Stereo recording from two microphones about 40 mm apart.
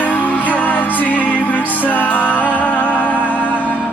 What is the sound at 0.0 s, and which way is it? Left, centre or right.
Music, left.